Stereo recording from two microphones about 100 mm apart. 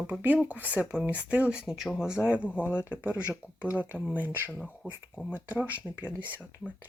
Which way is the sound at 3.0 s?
10° right (ahead or behind).